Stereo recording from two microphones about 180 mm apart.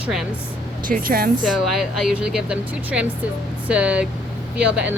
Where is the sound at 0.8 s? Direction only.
50° right (ahead or behind).